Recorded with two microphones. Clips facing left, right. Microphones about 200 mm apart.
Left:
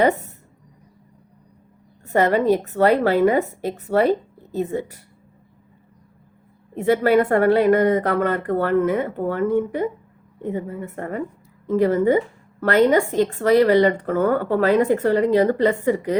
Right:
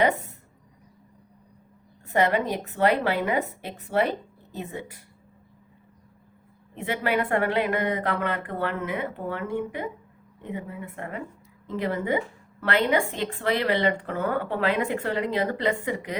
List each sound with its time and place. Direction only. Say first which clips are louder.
2.0 s a woman's voice: left 6 dB; 40° left (ahead or behind)
6.7 s a woman's voice: left 10 dB; 40° left (ahead or behind)